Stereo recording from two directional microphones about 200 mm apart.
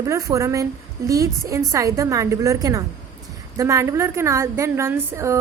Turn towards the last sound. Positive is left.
turn(degrees=-15)  # may be behind; listen again after turning